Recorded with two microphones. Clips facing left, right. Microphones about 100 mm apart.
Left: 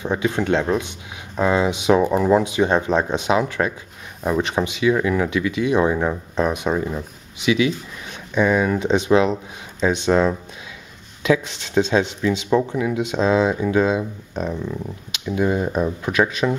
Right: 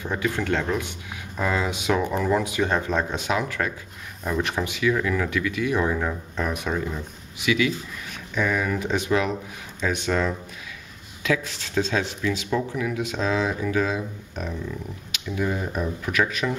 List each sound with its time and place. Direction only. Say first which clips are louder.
0.0 s speech: left 5 dB; 20° left (ahead or behind)